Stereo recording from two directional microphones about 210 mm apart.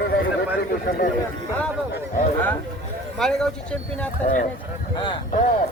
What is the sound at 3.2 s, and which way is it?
Speech, centre (ahead or behind).